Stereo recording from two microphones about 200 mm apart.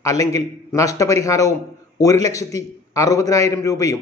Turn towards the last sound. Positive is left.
turn(degrees=15)  # may be behind; listen again after turning